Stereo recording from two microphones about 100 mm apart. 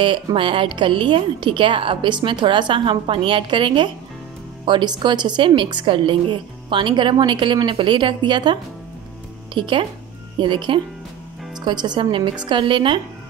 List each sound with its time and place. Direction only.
0.0 s a woman's voice: 55° right (ahead or behind)